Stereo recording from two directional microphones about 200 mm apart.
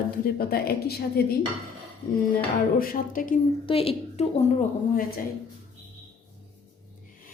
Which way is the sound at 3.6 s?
30° left (ahead or behind).